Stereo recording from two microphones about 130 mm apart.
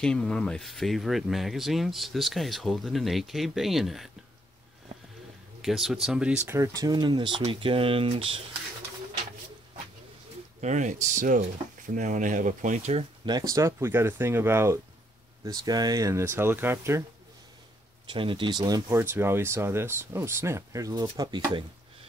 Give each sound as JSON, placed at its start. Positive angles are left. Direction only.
{"t": 0.0, "sound": "speech", "side_deg": 5}
{"t": 5.6, "sound": "speech", "side_deg": 0}
{"t": 6.4, "sound": "speech", "side_deg": -20}
{"t": 10.6, "sound": "speech", "side_deg": -65}
{"t": 13.2, "sound": "speech", "side_deg": -30}
{"t": 18.1, "sound": "speech", "side_deg": -40}